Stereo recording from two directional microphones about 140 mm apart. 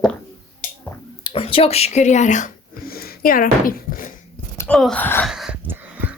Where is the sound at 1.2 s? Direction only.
40° left (ahead or behind); by 4.1 s 90° left.